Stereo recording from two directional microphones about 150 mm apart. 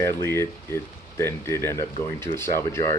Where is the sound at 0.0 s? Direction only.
20° left (ahead or behind).